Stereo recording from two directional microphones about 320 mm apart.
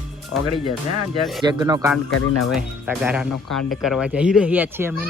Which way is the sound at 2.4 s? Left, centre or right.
Centre.